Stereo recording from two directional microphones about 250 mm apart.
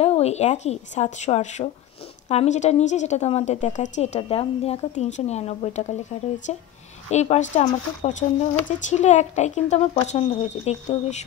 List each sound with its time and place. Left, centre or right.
0.0 s speech: left
7.1 s speech: left